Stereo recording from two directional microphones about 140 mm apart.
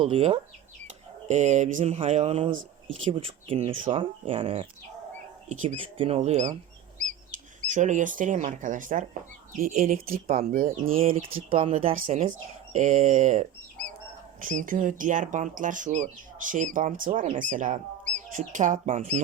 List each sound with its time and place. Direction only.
0.0 s speech: 45° right (ahead or behind)
1.3 s speech: 55° right (ahead or behind)
7.6 s speech: 60° right (ahead or behind)
9.5 s speech: 85° right
10.7 s speech: 45° right (ahead or behind)
12.7 s speech: 60° right (ahead or behind)
14.4 s speech: 70° right (ahead or behind)